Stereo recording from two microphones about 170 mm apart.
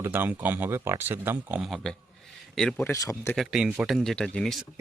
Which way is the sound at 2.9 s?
15° left (ahead or behind).